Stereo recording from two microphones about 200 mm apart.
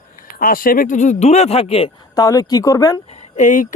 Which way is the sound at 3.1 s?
35° left (ahead or behind).